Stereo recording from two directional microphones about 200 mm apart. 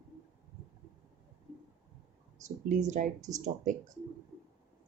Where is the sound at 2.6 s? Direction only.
35° right (ahead or behind).